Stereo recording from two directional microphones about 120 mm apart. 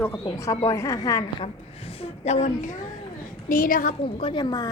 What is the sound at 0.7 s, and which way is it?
Speech, 25° left (ahead or behind).